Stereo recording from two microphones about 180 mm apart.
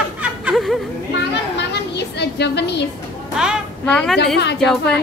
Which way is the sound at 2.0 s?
70° left (ahead or behind).